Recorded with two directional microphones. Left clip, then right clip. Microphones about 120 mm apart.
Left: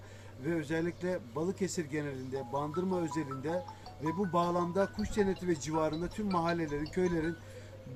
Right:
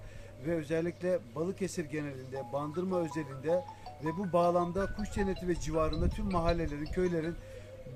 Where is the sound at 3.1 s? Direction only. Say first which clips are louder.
Right 3 dB; 25° right (ahead or behind).